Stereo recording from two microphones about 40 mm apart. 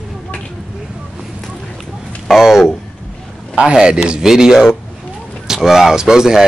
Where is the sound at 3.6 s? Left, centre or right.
Right.